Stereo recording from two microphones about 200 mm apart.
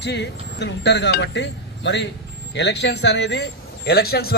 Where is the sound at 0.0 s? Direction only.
60° left (ahead or behind).